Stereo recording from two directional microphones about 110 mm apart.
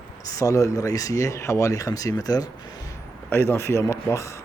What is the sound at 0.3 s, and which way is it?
Speech, 30° left (ahead or behind).